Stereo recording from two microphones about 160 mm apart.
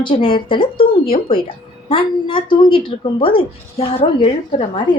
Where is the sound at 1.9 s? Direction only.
30° left (ahead or behind).